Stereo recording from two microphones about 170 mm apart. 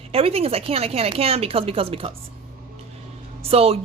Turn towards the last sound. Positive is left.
turn(degrees=-35)  # may be behind; listen again after turning